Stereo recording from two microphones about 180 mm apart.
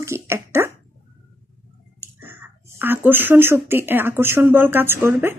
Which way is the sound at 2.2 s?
10° right (ahead or behind).